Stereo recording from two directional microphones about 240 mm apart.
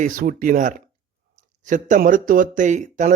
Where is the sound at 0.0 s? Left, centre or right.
Right.